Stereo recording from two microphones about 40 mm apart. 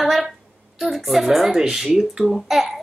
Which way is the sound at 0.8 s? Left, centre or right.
Centre.